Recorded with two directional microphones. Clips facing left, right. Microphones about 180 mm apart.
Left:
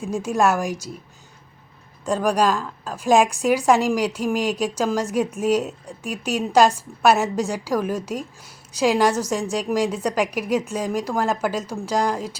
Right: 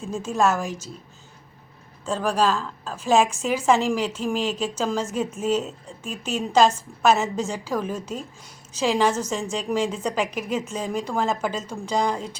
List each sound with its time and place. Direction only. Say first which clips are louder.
0.0 s a woman's voice: left 2 dB; 10° left (ahead or behind)
2.0 s a woman's voice: left 3 dB; 15° left (ahead or behind)